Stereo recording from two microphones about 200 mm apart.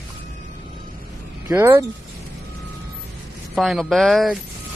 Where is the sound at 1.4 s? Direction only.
10° right (ahead or behind).